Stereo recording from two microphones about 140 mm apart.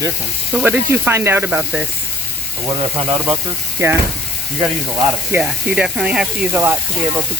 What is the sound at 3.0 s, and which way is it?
Speech, 45° right (ahead or behind).